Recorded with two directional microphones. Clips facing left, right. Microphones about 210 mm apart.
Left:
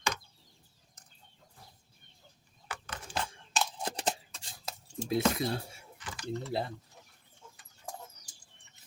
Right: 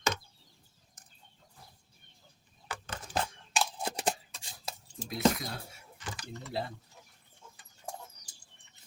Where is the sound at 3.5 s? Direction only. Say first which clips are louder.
Right 1 dB; 10° right (ahead or behind).